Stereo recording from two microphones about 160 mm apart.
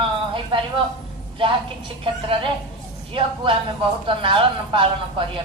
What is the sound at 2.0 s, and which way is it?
A man's voice, 30° right (ahead or behind).